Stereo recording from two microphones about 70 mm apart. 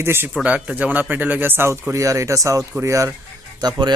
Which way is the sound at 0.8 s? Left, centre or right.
Right.